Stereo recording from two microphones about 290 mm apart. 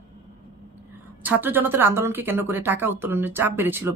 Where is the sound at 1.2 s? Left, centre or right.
Centre.